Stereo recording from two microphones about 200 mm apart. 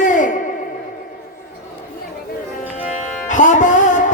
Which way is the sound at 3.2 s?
40° left (ahead or behind).